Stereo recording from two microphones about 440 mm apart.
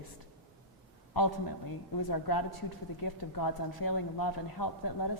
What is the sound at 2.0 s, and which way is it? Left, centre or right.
A woman's voice, left.